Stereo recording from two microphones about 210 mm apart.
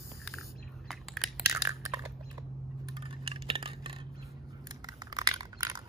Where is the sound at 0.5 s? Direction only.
Centre (ahead or behind).